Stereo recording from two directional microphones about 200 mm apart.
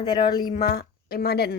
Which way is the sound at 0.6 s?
50° left (ahead or behind).